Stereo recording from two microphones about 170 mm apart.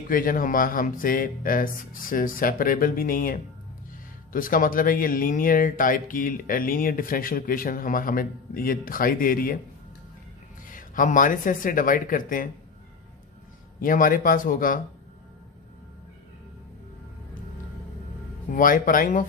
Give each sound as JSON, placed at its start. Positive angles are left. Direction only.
{"t": 0.1, "sound": "speech", "side_deg": 55}
{"t": 10.7, "sound": "speech", "side_deg": 50}
{"t": 13.7, "sound": "speech", "side_deg": 55}
{"t": 18.5, "sound": "speech", "side_deg": 55}